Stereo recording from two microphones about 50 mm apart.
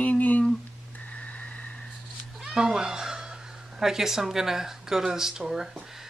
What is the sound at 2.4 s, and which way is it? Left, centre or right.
Speech, centre.